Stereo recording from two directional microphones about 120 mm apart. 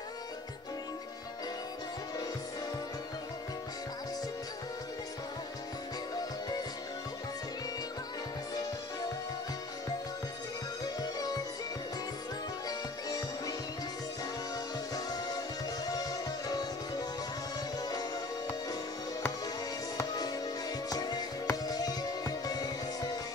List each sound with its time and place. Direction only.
11.0 s music: 30° left (ahead or behind)
12.6 s music: 30° left (ahead or behind)
15.0 s music: 35° left (ahead or behind)
20.0 s music: 30° left (ahead or behind)